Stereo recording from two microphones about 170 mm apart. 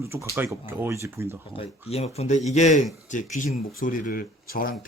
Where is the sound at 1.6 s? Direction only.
35° left (ahead or behind).